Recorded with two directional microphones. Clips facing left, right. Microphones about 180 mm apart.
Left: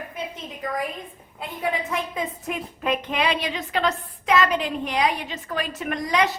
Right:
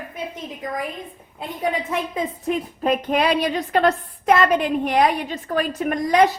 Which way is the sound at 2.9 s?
50° right (ahead or behind).